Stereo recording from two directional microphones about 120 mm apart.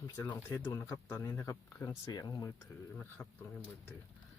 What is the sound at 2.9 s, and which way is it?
Speech, 10° left (ahead or behind).